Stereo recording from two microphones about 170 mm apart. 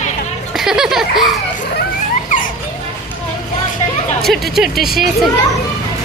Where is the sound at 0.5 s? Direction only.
5° right (ahead or behind).